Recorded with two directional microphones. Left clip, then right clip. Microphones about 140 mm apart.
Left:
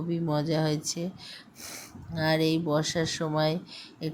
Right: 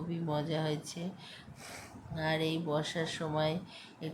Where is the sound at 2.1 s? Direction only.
35° left (ahead or behind).